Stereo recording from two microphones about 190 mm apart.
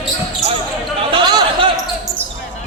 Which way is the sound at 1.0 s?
30° right (ahead or behind).